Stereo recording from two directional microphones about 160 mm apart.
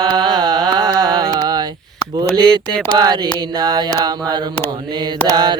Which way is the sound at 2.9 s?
25° right (ahead or behind).